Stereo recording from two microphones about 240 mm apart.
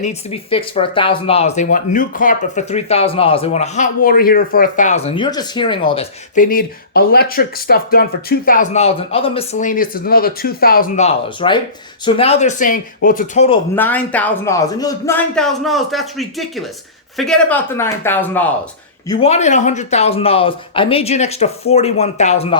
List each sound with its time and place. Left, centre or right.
0.0 s speech: left
13.7 s a man's voice: centre
19.0 s speech: left